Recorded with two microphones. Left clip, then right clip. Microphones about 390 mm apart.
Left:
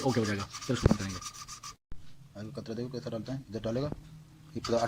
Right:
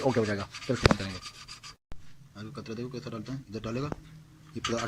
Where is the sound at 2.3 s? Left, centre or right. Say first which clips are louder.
Even; centre.